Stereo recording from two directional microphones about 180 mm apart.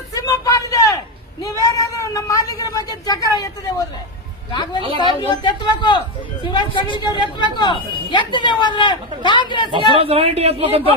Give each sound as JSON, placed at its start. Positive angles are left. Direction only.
{"t": 0.1, "sound": "a sound", "side_deg": 20}
{"t": 1.6, "sound": "a woman's voice", "side_deg": 20}
{"t": 9.7, "sound": "speech", "side_deg": -30}